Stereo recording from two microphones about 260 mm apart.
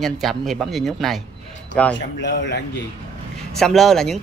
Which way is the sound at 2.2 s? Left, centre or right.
Left.